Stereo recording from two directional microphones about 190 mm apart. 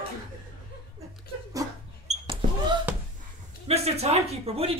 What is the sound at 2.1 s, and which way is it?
Basketball bounce, 30° right (ahead or behind).